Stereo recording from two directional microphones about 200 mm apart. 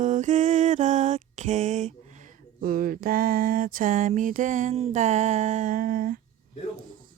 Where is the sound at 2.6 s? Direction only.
45° right (ahead or behind).